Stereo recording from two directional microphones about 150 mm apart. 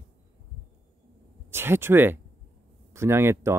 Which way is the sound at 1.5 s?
15° right (ahead or behind).